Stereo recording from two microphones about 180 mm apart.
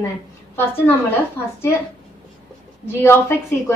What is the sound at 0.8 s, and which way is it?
Speech, 10° left (ahead or behind).